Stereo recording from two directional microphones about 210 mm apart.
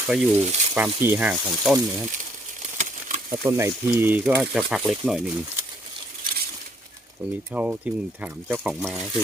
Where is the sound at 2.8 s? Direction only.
35° right (ahead or behind).